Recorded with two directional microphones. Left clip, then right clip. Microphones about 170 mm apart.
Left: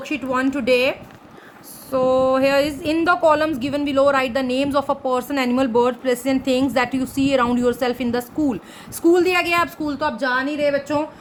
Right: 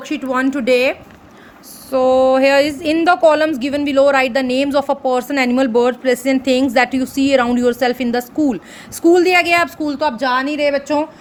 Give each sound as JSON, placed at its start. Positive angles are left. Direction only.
{"t": 0.0, "sound": "a woman's voice", "side_deg": -25}